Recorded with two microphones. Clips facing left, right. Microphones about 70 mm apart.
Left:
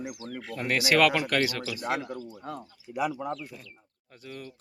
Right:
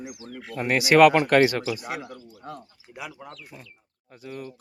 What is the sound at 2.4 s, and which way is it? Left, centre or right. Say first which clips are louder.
Speech: left 1 dB; centre.